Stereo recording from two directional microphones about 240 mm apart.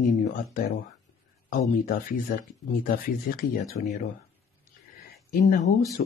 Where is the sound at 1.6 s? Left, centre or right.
Left.